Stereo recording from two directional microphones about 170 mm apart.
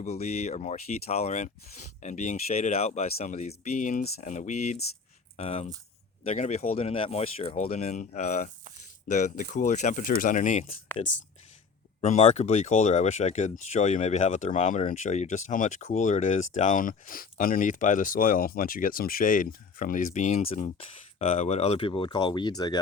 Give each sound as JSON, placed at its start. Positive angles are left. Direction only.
{"t": 0.0, "sound": "speech", "side_deg": 40}
{"t": 4.2, "sound": "speech", "side_deg": 45}
{"t": 11.9, "sound": "speech", "side_deg": 40}